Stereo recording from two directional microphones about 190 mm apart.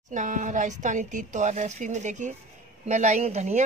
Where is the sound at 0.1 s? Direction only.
40° right (ahead or behind).